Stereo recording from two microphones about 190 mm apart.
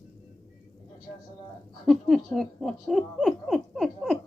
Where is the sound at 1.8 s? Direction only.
Centre (ahead or behind).